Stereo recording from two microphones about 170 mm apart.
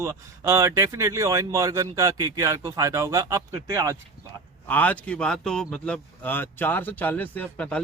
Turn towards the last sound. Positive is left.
turn(degrees=5)  # may be behind; listen again after turning